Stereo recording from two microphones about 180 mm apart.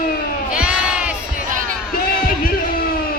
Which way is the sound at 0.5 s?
5° right (ahead or behind).